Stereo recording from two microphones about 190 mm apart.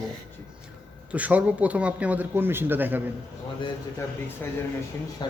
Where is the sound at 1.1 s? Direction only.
5° right (ahead or behind).